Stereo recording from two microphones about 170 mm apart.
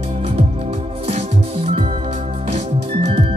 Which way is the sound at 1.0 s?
35° right (ahead or behind).